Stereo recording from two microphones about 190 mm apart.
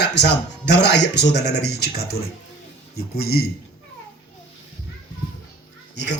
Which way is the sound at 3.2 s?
55° left (ahead or behind).